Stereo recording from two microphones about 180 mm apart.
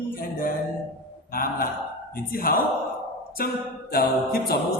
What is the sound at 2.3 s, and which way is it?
A capella, 55° left (ahead or behind).